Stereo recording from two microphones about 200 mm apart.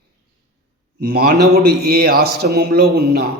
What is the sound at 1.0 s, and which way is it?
A man's voice, 50° right (ahead or behind).